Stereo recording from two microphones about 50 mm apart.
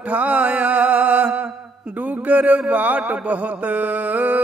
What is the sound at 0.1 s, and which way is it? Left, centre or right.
Mantra, right.